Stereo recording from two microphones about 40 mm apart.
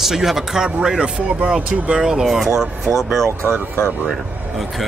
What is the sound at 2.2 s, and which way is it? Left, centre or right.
Speech, centre.